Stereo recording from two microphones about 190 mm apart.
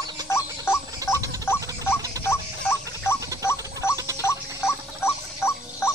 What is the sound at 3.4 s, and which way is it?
Rodents, 15° left (ahead or behind).